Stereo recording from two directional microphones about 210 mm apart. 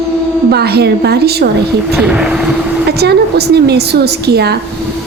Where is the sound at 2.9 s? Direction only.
50° right (ahead or behind).